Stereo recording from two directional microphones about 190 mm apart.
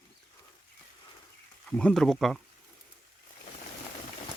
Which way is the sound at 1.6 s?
5° left (ahead or behind).